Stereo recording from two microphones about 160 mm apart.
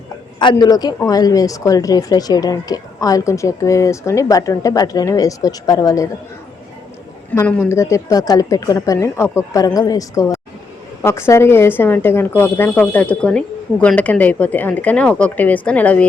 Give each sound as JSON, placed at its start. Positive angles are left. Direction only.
{"t": 0.3, "sound": "speech", "side_deg": 30}
{"t": 7.3, "sound": "speech", "side_deg": 15}